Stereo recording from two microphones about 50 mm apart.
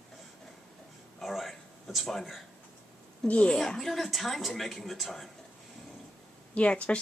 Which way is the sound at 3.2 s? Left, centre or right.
Left.